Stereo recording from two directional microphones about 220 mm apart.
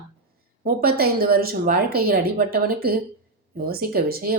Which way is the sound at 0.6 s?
40° right (ahead or behind).